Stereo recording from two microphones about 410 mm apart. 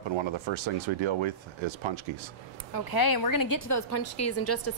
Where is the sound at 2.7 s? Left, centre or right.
Left.